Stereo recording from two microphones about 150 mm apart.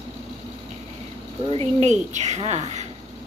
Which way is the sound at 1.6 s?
50° right (ahead or behind).